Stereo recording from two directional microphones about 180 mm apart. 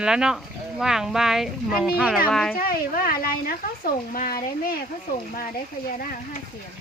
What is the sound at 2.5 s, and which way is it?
Speech, 55° left (ahead or behind).